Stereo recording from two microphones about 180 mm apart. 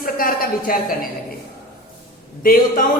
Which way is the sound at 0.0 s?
50° left (ahead or behind).